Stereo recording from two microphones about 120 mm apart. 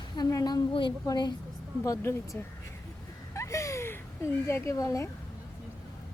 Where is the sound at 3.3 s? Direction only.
25° left (ahead or behind).